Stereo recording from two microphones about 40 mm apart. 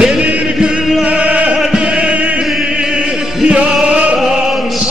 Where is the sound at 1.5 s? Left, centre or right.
Right.